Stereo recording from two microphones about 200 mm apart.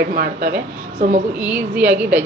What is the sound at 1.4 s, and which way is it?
Speech, 5° right (ahead or behind).